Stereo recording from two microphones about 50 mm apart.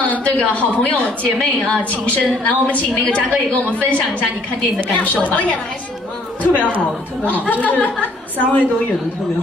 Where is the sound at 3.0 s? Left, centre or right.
Left.